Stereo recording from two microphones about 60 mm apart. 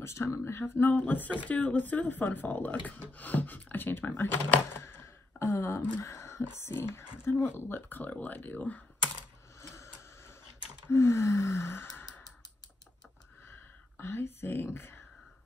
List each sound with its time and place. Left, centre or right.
0.0 s speech: left
6.0 s a sound: left
6.6 s speech: left
10.9 s sigh: left
13.5 s whispering: left